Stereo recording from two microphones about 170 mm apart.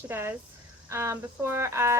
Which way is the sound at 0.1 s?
10° right (ahead or behind).